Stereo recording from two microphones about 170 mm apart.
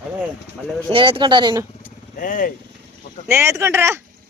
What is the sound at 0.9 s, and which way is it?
Speech, 30° right (ahead or behind).